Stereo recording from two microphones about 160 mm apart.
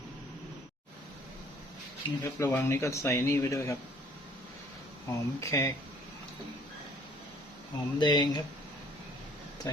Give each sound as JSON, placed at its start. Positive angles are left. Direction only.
{"t": 2.0, "sound": "speech", "side_deg": 30}
{"t": 2.4, "sound": "speech", "side_deg": 10}
{"t": 5.0, "sound": "speech", "side_deg": 20}
{"t": 7.9, "sound": "speech", "side_deg": 30}